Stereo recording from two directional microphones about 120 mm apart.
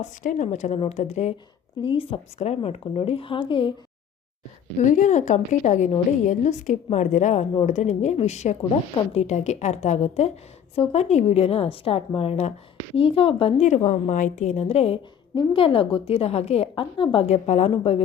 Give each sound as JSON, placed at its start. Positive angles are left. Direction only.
{"t": 0.0, "sound": "a woman's voice", "side_deg": 85}
{"t": 1.8, "sound": "a woman's voice", "side_deg": 45}
{"t": 4.8, "sound": "a woman's voice", "side_deg": 90}
{"t": 13.7, "sound": "a woman's voice", "side_deg": 75}
{"t": 15.4, "sound": "a woman's voice", "side_deg": 50}
{"t": 17.2, "sound": "a woman's voice", "side_deg": 65}